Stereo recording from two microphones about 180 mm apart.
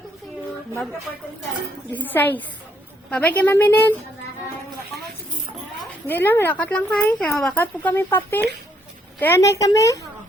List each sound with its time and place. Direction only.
1.9 s speech: 10° left (ahead or behind)
6.1 s speech: 10° left (ahead or behind)